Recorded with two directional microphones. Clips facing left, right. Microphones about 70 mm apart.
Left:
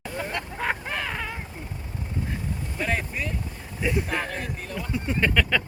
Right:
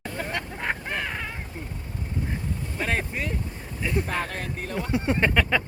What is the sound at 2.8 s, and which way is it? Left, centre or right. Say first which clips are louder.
Vehicle: even; right.